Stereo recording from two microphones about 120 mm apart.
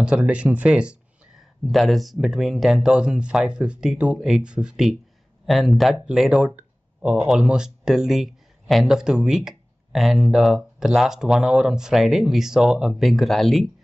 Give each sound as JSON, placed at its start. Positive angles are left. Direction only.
{"t": 0.0, "sound": "speech", "side_deg": -10}